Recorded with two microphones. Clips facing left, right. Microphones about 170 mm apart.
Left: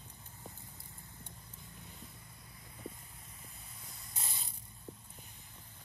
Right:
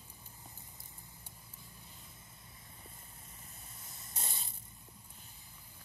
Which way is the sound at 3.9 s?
25° right (ahead or behind).